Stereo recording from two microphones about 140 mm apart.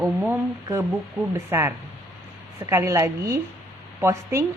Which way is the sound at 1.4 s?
15° right (ahead or behind).